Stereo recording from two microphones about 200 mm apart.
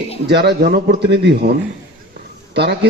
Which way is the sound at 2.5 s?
55° right (ahead or behind).